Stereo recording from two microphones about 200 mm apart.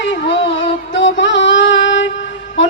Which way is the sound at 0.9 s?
65° left (ahead or behind).